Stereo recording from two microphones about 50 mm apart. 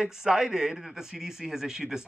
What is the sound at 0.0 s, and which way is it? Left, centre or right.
A man's voice, centre.